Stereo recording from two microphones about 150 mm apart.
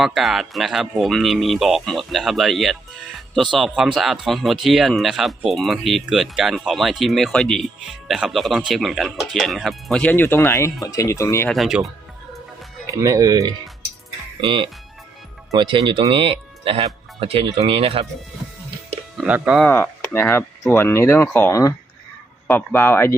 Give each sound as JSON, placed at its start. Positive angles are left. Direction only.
{"t": 0.0, "sound": "speech", "side_deg": 0}
{"t": 11.4, "sound": "speech", "side_deg": 0}
{"t": 12.9, "sound": "speech", "side_deg": -20}
{"t": 14.4, "sound": "speech", "side_deg": -35}
{"t": 19.2, "sound": "speech", "side_deg": -5}
{"t": 19.6, "sound": "speech", "side_deg": 15}